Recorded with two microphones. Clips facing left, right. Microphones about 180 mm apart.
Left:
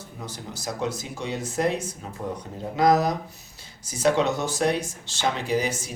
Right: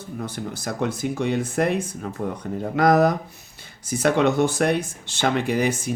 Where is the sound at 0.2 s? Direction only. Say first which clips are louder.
Right 6 dB; 55° right (ahead or behind).